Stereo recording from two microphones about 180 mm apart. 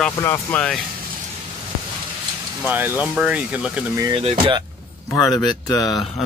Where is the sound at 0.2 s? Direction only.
10° left (ahead or behind).